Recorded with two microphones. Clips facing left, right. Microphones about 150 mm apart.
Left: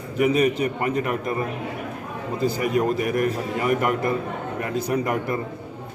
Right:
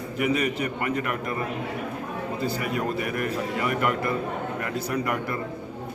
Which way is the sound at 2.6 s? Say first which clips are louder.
Left 6 dB; 40° left (ahead or behind).